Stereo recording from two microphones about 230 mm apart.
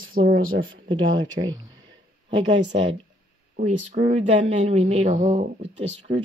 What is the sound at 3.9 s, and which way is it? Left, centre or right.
Speech, right.